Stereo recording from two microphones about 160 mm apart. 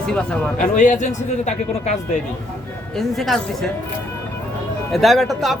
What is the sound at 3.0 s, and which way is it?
Speech, centre (ahead or behind).